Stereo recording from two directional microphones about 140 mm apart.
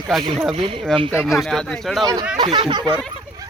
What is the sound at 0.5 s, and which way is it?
Speech, 40° right (ahead or behind).